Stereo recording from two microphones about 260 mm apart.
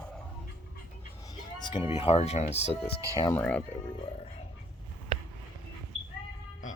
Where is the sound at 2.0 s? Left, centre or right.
Left.